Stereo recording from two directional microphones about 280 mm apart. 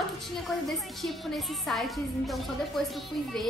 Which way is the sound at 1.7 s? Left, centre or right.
Centre.